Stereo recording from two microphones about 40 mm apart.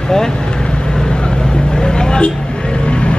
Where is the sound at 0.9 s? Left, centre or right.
Centre.